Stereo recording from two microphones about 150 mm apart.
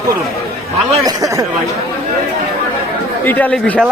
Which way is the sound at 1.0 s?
25° right (ahead or behind).